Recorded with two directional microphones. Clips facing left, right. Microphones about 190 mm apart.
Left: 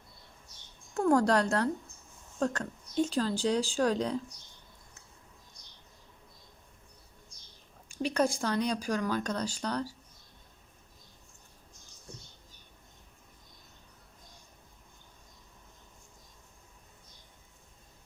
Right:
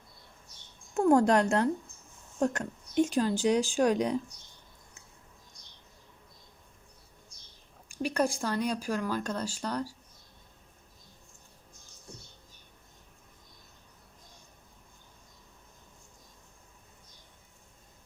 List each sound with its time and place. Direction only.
0.9 s speech: 20° right (ahead or behind)
8.0 s speech: 10° right (ahead or behind)